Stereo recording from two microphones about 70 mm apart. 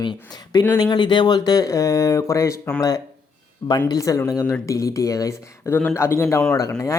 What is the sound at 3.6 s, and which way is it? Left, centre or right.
Speech, left.